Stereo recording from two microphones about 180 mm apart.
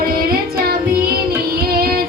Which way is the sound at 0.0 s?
55° right (ahead or behind).